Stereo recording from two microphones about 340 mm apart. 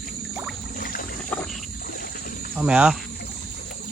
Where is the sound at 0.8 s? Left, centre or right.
Left.